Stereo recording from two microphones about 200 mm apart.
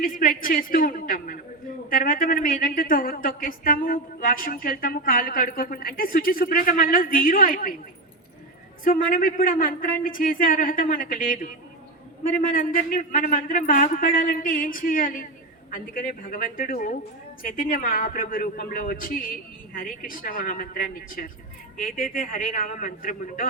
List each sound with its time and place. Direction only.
0.0 s speech: 45° left (ahead or behind)
8.8 s speech: 45° left (ahead or behind)